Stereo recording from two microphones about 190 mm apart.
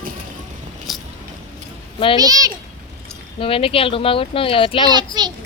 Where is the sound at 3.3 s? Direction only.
30° left (ahead or behind).